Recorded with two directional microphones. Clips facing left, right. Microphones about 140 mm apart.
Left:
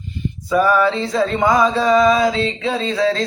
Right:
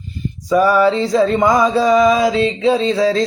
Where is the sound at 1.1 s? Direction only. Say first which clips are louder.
Right 3 dB; 20° right (ahead or behind).